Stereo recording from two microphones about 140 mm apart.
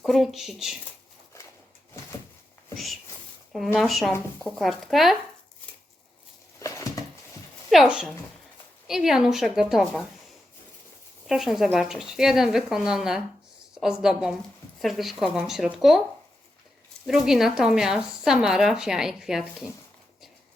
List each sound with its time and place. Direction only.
0.0 s speech: centre (ahead or behind)
2.7 s speech: centre (ahead or behind)
6.6 s a sound: 25° left (ahead or behind)
7.7 s speech: 5° right (ahead or behind)
11.3 s speech: 5° right (ahead or behind)
17.1 s speech: 5° right (ahead or behind)